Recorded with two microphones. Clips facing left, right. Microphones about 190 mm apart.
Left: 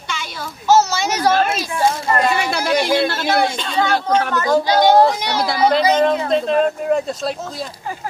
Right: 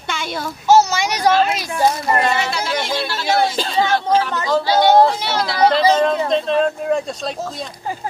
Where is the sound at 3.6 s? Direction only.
30° right (ahead or behind).